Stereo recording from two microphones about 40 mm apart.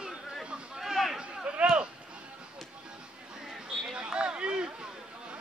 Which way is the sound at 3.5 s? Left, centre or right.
Centre.